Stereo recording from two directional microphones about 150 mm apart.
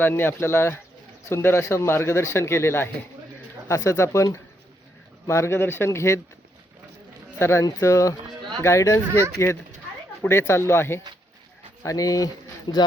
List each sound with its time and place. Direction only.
0.0 s speech: 15° left (ahead or behind)
7.3 s speech: 15° left (ahead or behind)